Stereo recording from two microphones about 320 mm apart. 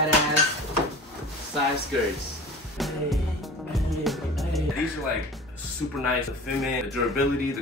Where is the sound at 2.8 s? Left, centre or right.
Centre.